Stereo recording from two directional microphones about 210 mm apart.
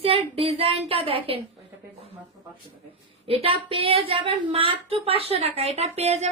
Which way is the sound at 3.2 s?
25° right (ahead or behind).